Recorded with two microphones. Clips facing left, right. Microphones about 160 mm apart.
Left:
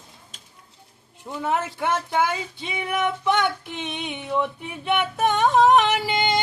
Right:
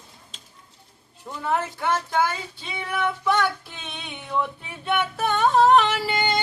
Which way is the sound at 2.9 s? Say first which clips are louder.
Left 1 dB; 20° left (ahead or behind).